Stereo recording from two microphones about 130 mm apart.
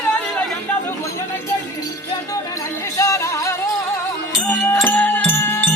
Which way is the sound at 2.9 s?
25° left (ahead or behind).